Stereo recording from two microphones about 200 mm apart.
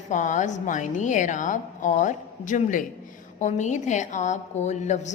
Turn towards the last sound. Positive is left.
turn(degrees=35)  # may be behind; listen again after turning